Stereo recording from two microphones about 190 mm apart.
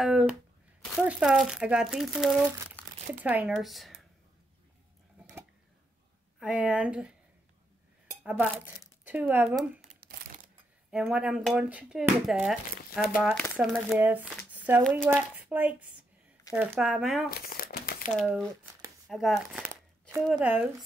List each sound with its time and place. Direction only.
0.0 s speech: 5° right (ahead or behind)
6.4 s speech: 5° right (ahead or behind)
8.2 s speech: 10° right (ahead or behind)
10.9 s speech: 5° right (ahead or behind)
17.3 s crumpling: 50° left (ahead or behind)
18.1 s speech: centre (ahead or behind)
19.0 s crumpling: centre (ahead or behind)
20.2 s speech: 5° right (ahead or behind)